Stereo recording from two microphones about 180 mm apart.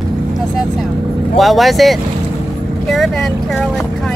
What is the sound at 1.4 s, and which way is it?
Speech, centre (ahead or behind).